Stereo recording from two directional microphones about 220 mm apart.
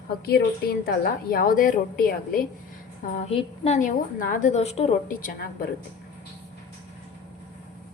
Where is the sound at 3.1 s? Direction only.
30° left (ahead or behind).